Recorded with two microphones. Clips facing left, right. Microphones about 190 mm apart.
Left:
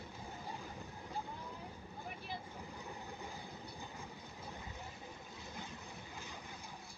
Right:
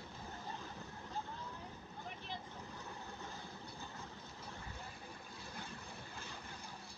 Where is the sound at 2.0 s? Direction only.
10° left (ahead or behind).